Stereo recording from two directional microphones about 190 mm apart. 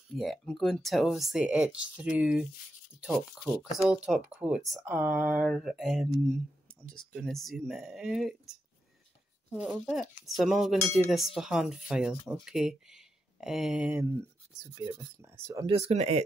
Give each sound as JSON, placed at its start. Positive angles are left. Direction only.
{"t": 0.1, "sound": "speech", "side_deg": 0}
{"t": 3.7, "sound": "speech", "side_deg": -5}
{"t": 9.7, "sound": "speech", "side_deg": 0}
{"t": 15.9, "sound": "speech", "side_deg": -35}